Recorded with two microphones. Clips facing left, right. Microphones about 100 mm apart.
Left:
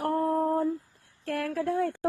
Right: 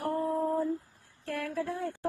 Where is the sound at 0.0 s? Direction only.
60° left (ahead or behind).